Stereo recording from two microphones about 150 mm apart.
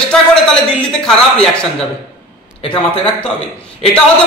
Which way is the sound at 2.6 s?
35° left (ahead or behind).